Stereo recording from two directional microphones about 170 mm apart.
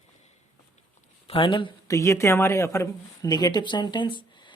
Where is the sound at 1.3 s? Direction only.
30° left (ahead or behind).